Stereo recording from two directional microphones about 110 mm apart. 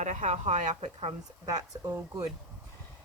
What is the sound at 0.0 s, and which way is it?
A woman's voice, 90° right.